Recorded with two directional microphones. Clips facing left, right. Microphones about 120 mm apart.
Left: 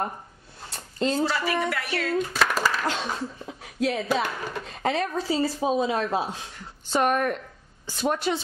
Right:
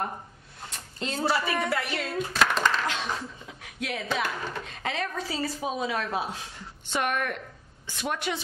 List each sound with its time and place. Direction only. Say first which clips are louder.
0.7 s a sound: left 8 dB; 35° left (ahead or behind)
1.3 s a woman's voice: left 1 dB; 25° right (ahead or behind)
2.3 s a sound: even; 5° left (ahead or behind)
2.9 s speech: left 3 dB; 35° left (ahead or behind)
4.2 s speech: left 2 dB; 10° left (ahead or behind)
4.6 s speech: left 9 dB; 35° left (ahead or behind)